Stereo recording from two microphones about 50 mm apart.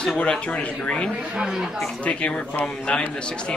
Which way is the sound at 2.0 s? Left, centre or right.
Left.